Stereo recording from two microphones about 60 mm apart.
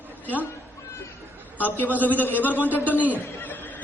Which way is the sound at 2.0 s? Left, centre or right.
Left.